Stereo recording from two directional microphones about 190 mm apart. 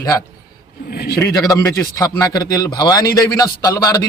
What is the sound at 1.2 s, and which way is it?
A man's voice, 20° left (ahead or behind).